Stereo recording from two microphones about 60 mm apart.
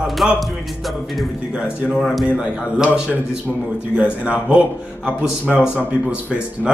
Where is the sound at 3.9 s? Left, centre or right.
Centre.